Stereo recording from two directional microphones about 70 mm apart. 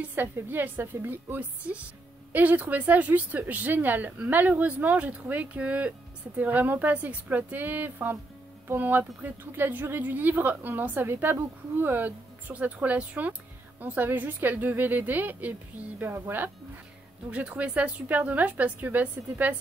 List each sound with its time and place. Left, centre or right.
0.1 s speech: right